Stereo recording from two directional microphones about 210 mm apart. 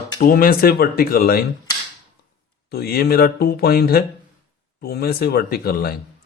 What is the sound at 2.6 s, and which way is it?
Speech, 50° left (ahead or behind).